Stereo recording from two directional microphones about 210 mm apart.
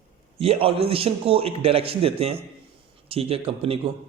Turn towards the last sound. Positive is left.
turn(degrees=-25)  # may be behind; listen again after turning